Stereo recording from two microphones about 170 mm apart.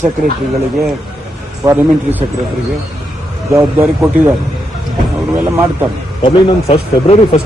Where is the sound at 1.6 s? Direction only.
15° right (ahead or behind).